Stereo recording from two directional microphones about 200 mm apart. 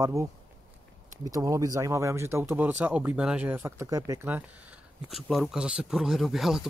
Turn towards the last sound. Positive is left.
turn(degrees=0)  # may be behind; listen again after turning